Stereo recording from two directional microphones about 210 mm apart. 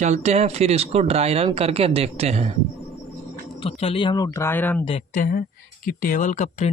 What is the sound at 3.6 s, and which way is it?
Speech, 25° left (ahead or behind).